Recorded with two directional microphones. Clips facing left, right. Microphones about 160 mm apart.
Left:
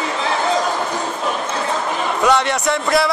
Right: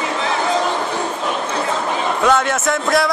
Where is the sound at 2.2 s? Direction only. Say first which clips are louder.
Even; 5° right (ahead or behind).